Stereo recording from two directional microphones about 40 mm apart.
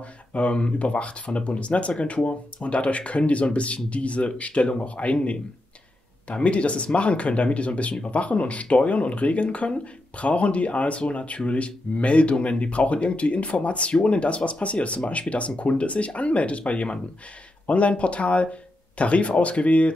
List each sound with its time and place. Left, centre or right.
0.0 s speech: left